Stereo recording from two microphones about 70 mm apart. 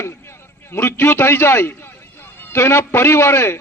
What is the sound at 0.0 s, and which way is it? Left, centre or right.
A man's voice, left.